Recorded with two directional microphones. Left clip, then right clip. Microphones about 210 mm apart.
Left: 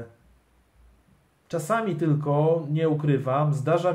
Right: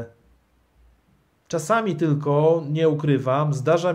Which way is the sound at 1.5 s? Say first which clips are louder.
Right 4 dB; 45° right (ahead or behind).